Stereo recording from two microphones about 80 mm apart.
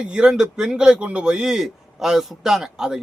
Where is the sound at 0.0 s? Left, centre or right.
Centre.